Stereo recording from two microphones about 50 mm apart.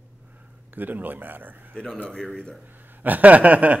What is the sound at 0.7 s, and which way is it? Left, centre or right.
Speech, right.